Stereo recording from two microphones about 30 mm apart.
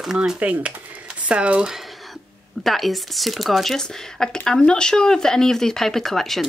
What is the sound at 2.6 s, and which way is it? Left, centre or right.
Speech, centre.